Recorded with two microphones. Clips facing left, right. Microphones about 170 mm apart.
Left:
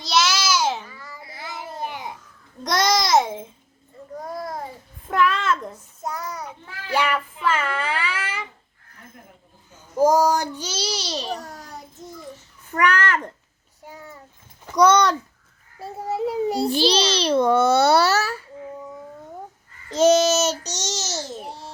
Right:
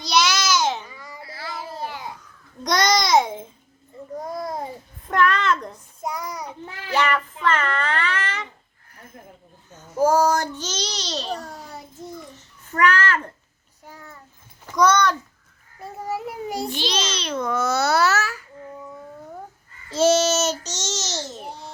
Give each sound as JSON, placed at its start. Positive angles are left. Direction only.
{"t": 0.0, "sound": "babbling", "side_deg": 0}
{"t": 0.9, "sound": "babbling", "side_deg": -15}
{"t": 1.2, "sound": "babbling", "side_deg": 20}
{"t": 2.6, "sound": "babbling", "side_deg": 5}
{"t": 4.2, "sound": "babbling", "side_deg": -20}
{"t": 5.0, "sound": "a sound", "side_deg": 5}
{"t": 6.0, "sound": "child singing", "side_deg": -15}
{"t": 6.9, "sound": "child singing", "side_deg": 10}
{"t": 9.7, "sound": "a child's voice", "side_deg": 15}
{"t": 11.3, "sound": "a sound", "side_deg": 0}
{"t": 12.8, "sound": "a child's voice", "side_deg": 15}
{"t": 13.8, "sound": "a sound", "side_deg": 15}
{"t": 14.8, "sound": "a child's voice", "side_deg": 20}
{"t": 20.0, "sound": "babbling", "side_deg": 15}